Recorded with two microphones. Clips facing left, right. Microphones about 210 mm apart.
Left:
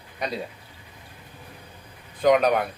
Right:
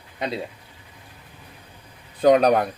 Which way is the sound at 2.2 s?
35° right (ahead or behind).